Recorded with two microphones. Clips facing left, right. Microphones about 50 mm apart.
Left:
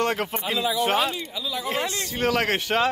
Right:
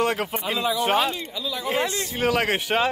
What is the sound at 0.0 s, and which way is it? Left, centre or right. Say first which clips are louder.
A man's voice: right 1 dB; centre.